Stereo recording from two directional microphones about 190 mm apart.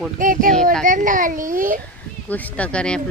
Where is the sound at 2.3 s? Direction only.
10° left (ahead or behind).